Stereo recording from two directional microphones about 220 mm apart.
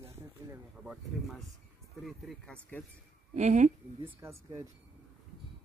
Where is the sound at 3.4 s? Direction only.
35° right (ahead or behind).